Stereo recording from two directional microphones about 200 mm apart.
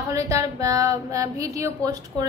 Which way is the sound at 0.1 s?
15° right (ahead or behind).